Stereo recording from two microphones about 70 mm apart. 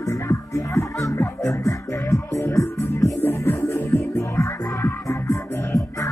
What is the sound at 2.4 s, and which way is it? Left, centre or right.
Music, left.